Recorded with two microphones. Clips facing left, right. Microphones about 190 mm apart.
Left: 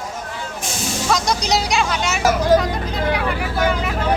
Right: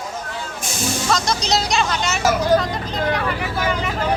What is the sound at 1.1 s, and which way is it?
Speech, 15° left (ahead or behind).